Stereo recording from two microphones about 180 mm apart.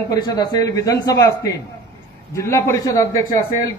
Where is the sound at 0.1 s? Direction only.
20° left (ahead or behind).